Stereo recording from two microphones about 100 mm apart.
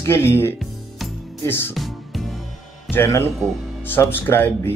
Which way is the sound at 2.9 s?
25° left (ahead or behind).